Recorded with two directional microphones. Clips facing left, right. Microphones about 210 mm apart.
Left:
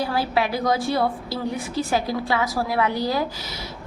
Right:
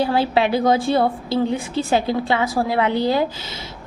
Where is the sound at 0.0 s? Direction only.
25° right (ahead or behind).